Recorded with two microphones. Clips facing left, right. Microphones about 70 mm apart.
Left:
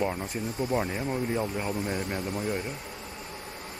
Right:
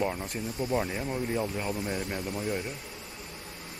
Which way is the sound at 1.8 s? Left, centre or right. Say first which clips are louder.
Left 2 dB; left.